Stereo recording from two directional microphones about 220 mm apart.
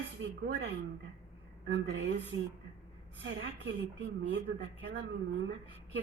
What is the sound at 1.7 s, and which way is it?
Speech, 60° right (ahead or behind).